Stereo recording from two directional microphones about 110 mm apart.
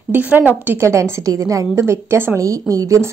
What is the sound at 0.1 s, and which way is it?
A woman's voice, 15° right (ahead or behind).